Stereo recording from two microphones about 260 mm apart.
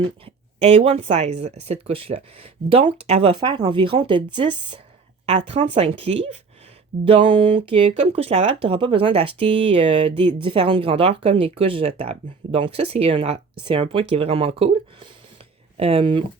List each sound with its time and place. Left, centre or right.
0.3 s speech: right